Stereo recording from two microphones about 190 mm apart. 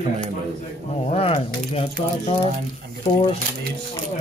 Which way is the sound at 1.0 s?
30° left (ahead or behind).